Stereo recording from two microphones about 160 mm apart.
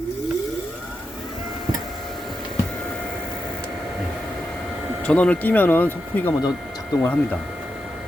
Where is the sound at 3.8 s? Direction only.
Centre (ahead or behind).